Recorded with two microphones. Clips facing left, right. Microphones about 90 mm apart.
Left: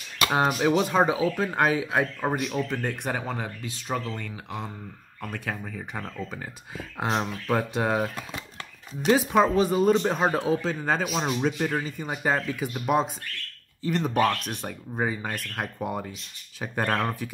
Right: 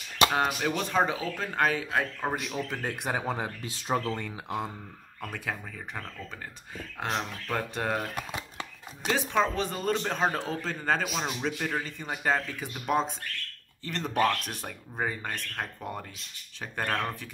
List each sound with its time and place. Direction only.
0.3 s speech: 15° left (ahead or behind)
2.5 s speech: 5° right (ahead or behind)
5.2 s speech: centre (ahead or behind)
7.0 s speech: 15° left (ahead or behind)
8.2 s a sound: 15° right (ahead or behind)
9.0 s speech: 10° left (ahead or behind)
11.1 s a man's voice: 20° left (ahead or behind)
11.4 s speech: 5° left (ahead or behind)